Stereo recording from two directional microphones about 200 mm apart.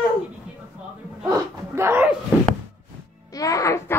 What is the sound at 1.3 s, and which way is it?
Speech, 15° right (ahead or behind).